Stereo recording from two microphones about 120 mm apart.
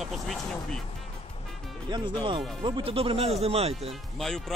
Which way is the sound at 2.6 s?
45° right (ahead or behind).